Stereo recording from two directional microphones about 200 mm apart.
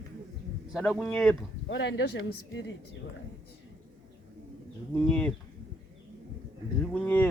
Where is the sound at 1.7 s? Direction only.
60° left (ahead or behind).